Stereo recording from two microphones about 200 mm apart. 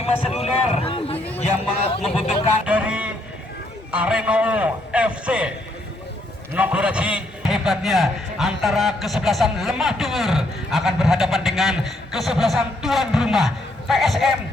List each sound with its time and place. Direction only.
0.4 s a man's voice: 30° left (ahead or behind)
2.6 s a sound: 5° right (ahead or behind)
3.9 s a man's voice: 5° right (ahead or behind)
6.5 s a man's voice: 10° right (ahead or behind)